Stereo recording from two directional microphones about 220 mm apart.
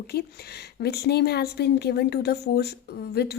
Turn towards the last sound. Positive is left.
turn(degrees=45)  # may be behind; listen again after turning